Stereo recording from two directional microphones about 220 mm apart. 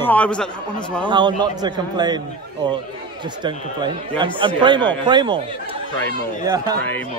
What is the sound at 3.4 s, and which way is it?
Speech, 20° right (ahead or behind).